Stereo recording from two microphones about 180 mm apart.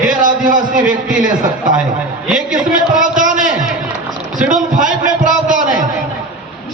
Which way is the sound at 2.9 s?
45° right (ahead or behind).